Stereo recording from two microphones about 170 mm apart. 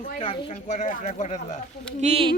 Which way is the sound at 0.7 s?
45° left (ahead or behind).